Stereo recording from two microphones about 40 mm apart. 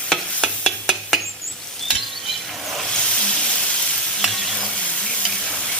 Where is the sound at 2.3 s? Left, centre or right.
Centre.